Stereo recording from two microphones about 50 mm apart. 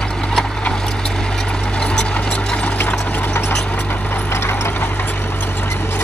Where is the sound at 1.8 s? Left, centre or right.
Centre.